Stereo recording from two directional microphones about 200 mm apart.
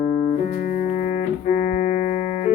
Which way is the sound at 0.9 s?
35° left (ahead or behind).